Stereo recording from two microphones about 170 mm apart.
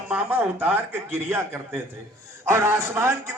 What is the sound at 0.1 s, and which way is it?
A man's voice, 10° right (ahead or behind).